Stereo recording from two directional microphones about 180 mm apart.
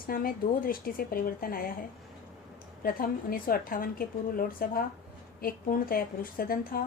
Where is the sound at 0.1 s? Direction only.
55° left (ahead or behind).